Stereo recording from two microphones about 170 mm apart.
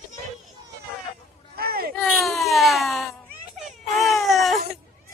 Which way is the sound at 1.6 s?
65° right (ahead or behind).